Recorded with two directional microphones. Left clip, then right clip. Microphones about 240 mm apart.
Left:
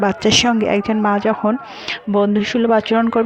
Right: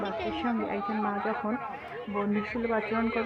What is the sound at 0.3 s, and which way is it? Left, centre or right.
Speech, left.